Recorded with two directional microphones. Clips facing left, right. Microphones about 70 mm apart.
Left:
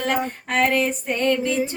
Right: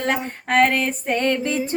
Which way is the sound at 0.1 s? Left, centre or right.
Right.